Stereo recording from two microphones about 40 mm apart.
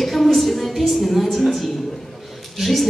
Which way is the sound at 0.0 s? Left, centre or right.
Centre.